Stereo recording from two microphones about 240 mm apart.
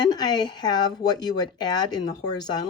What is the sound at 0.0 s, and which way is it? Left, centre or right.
A woman's voice, centre.